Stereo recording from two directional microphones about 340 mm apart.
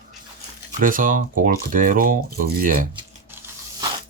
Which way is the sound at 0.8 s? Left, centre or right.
Right.